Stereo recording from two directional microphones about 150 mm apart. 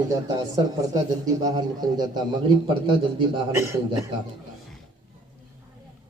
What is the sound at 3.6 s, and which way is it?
Speech, 20° right (ahead or behind).